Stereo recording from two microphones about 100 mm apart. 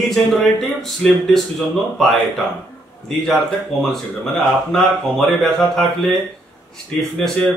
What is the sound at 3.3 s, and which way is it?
Speech, 5° left (ahead or behind).